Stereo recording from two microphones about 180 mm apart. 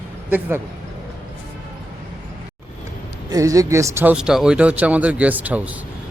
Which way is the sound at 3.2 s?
20° right (ahead or behind).